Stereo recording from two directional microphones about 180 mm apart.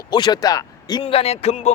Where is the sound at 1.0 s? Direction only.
35° left (ahead or behind).